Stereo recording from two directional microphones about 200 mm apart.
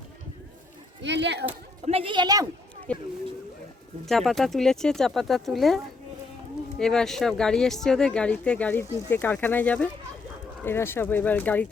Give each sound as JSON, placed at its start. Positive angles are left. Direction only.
{"t": 1.0, "sound": "speech", "side_deg": -60}
{"t": 1.8, "sound": "a woman's voice", "side_deg": -30}
{"t": 2.9, "sound": "speech", "side_deg": 5}